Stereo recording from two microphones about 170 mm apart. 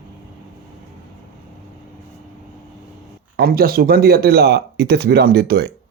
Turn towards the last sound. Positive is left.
turn(degrees=-70)  # may be behind; listen again after turning